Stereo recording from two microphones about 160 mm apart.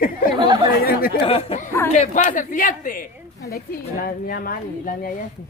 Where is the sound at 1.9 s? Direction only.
50° left (ahead or behind).